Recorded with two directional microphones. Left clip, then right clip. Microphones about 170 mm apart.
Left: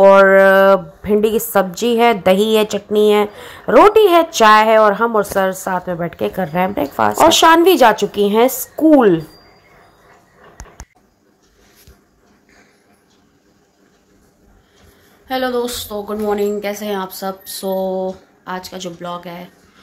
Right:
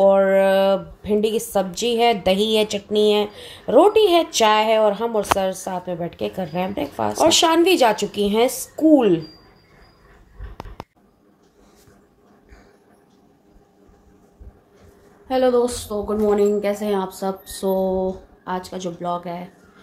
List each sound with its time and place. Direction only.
0.2 s a woman's voice: 15° left (ahead or behind)
15.2 s speech: 10° right (ahead or behind)